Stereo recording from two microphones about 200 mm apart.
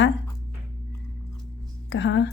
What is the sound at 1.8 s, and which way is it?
Speech, 65° left (ahead or behind).